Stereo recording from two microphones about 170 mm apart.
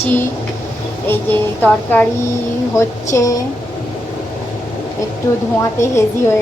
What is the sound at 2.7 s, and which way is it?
Speech, 20° left (ahead or behind).